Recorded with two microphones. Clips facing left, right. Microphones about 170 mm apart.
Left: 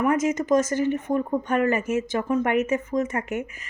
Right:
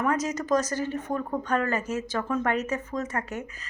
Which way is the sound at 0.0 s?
20° left (ahead or behind).